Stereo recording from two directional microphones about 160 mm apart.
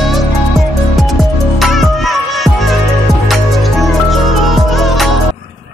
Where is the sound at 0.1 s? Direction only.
Centre (ahead or behind).